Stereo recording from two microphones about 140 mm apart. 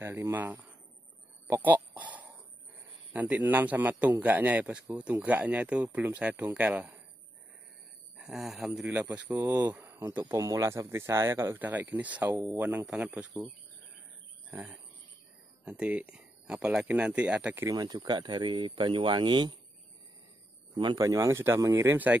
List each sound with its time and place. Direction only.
0.0 s speech: 20° right (ahead or behind)
8.2 s speech: 5° right (ahead or behind)
15.6 s speech: 10° right (ahead or behind)
17.6 s speech: 30° right (ahead or behind)
20.7 s speech: 35° right (ahead or behind); by 22.2 s 10° right (ahead or behind)